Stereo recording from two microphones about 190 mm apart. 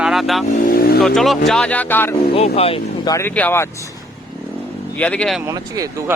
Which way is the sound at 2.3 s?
30° left (ahead or behind).